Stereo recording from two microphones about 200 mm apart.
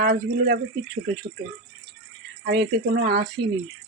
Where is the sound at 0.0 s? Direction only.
50° right (ahead or behind).